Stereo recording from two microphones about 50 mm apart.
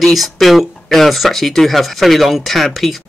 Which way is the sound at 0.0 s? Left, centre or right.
Centre.